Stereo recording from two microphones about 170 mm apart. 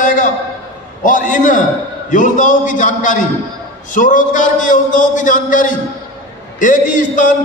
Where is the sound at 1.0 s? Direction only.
50° left (ahead or behind).